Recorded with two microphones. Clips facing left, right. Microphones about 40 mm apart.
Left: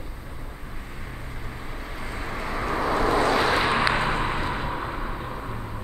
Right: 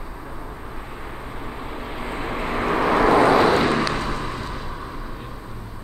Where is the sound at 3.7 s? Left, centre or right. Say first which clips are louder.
Even; left.